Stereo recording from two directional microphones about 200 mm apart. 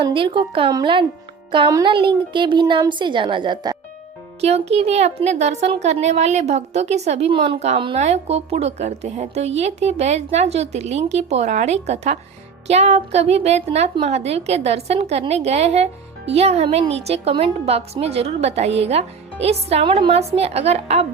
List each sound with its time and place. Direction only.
0.0 s speech: 25° right (ahead or behind)
4.4 s speech: 30° right (ahead or behind)